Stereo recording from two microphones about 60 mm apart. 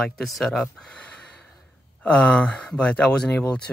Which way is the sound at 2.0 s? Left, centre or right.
Left.